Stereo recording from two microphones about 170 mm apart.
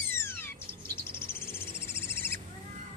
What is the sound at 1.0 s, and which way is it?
Bird, 15° left (ahead or behind).